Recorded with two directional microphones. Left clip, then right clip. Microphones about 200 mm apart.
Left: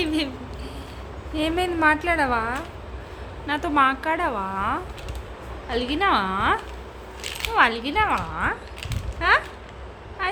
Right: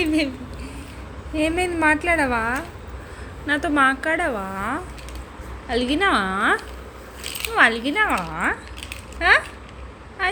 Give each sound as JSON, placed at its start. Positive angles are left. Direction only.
{"t": 0.0, "sound": "a sound", "side_deg": -5}
{"t": 1.4, "sound": "a woman's voice", "side_deg": -5}
{"t": 2.4, "sound": "a woman's voice", "side_deg": -15}